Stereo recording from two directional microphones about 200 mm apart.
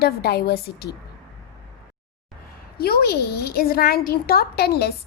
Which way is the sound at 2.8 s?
50° left (ahead or behind).